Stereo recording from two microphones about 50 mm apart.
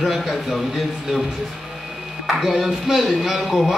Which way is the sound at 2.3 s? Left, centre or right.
Centre.